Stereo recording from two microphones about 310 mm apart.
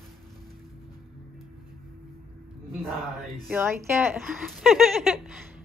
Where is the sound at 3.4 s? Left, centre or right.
Centre.